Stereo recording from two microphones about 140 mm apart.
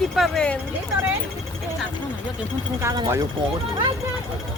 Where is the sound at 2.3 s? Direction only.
20° right (ahead or behind).